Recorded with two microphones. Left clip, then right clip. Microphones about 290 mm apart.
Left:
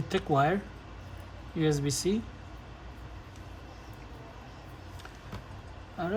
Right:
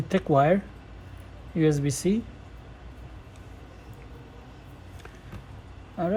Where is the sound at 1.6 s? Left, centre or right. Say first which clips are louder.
Right 5 dB; centre.